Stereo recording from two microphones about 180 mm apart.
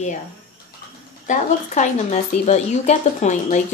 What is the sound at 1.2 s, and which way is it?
Speech, 40° left (ahead or behind).